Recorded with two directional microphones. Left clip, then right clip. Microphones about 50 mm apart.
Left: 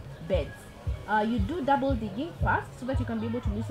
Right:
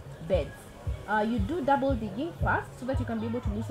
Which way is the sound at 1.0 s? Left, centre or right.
Right.